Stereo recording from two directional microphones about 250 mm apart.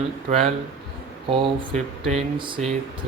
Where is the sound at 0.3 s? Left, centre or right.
Right.